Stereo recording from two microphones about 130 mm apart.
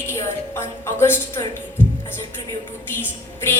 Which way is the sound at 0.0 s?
20° left (ahead or behind).